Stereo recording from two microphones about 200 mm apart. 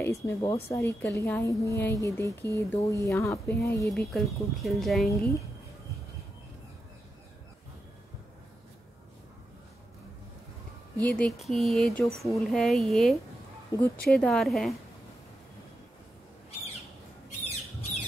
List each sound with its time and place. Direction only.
0.0 s speech: 15° left (ahead or behind)
0.4 s speech: 30° left (ahead or behind)
0.7 s a woman's voice: 15° left (ahead or behind)
3.8 s speech: centre (ahead or behind)
11.0 s a woman's voice: 5° left (ahead or behind)
13.7 s speech: 15° left (ahead or behind)
14.0 s speech: 5° left (ahead or behind)